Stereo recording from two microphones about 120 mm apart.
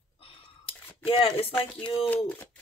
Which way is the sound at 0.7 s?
50° left (ahead or behind).